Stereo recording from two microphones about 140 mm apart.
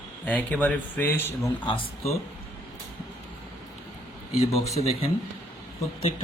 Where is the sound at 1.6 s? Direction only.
45° left (ahead or behind).